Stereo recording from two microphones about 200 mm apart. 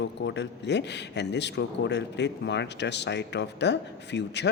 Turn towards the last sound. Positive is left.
turn(degrees=60)  # may be behind; listen again after turning